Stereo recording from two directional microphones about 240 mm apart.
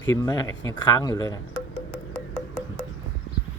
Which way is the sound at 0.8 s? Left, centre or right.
Centre.